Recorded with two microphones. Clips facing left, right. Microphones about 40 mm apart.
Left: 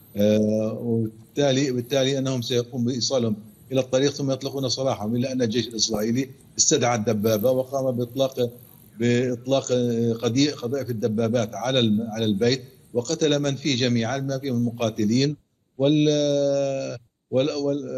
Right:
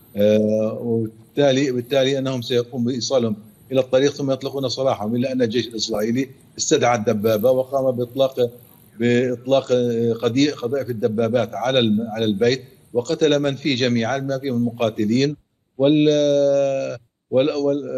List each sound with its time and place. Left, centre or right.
0.1 s mantra: centre
0.5 s speech: centre
0.7 s a man's voice: centre
4.0 s a man's voice: centre
12.9 s a man's voice: centre
13.7 s a man's voice: centre
16.2 s a man's voice: centre